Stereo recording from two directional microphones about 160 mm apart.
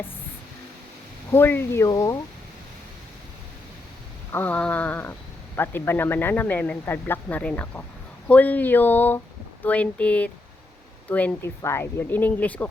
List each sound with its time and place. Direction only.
1.3 s speech: 15° left (ahead or behind)
4.3 s speech: 10° left (ahead or behind)